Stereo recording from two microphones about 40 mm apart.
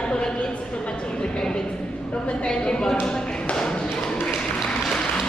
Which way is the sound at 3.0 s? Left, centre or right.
Centre.